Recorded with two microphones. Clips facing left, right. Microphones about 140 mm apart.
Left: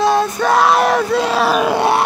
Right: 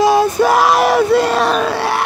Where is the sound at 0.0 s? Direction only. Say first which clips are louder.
Right 3 dB; 10° right (ahead or behind).